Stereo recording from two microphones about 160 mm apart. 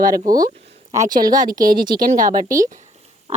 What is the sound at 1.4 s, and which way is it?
Speech, 55° right (ahead or behind).